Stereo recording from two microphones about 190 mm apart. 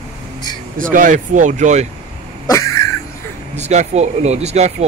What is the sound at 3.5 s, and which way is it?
Speech, 35° right (ahead or behind).